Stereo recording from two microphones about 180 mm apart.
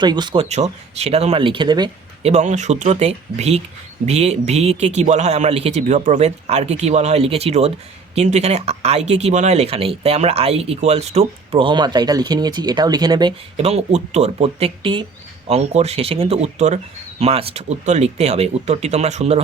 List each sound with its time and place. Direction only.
0.0 s speech: 25° right (ahead or behind)
0.4 s speech: 40° right (ahead or behind)
2.3 s speech: 40° right (ahead or behind); by 13.3 s 20° right (ahead or behind)
13.6 s speech: 35° right (ahead or behind)